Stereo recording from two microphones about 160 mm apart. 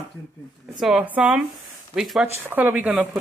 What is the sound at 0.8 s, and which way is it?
Speech, 5° right (ahead or behind).